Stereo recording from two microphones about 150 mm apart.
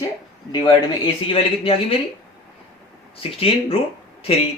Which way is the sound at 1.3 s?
40° left (ahead or behind).